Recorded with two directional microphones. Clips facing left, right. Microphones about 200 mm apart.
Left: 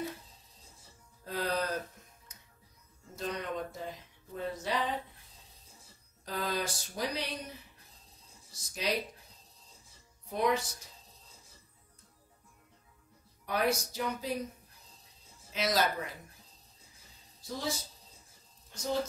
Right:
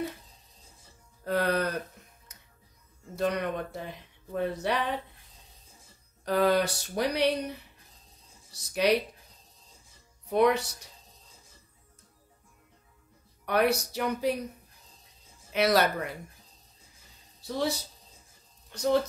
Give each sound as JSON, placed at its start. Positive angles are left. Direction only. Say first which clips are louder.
{"t": 1.2, "sound": "music", "louder": "right 6 dB", "side_deg": -65}
{"t": 3.2, "sound": "speech", "louder": "right 7 dB", "side_deg": -65}
{"t": 6.2, "sound": "speech", "louder": "right 11 dB", "side_deg": -65}
{"t": 8.5, "sound": "speech", "louder": "right 9 dB", "side_deg": -65}
{"t": 10.3, "sound": "speech", "louder": "right 7 dB", "side_deg": -65}
{"t": 13.5, "sound": "speech", "louder": "right 5 dB", "side_deg": -65}
{"t": 15.5, "sound": "speech", "louder": "right 6 dB", "side_deg": -65}
{"t": 17.4, "sound": "speech", "louder": "right 7 dB", "side_deg": -65}